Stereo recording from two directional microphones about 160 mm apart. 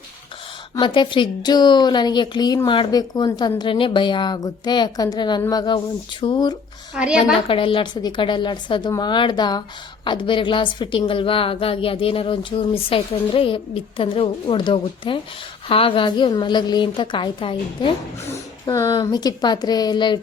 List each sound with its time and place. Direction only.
0.8 s a woman's voice: 30° left (ahead or behind)
6.9 s a woman's voice: 5° right (ahead or behind)
7.3 s a woman's voice: 35° left (ahead or behind)
18.6 s a woman's voice: 20° left (ahead or behind)